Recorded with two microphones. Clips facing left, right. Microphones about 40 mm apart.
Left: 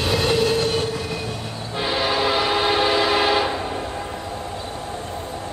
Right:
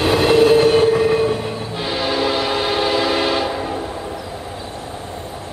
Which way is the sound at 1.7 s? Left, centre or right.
Centre.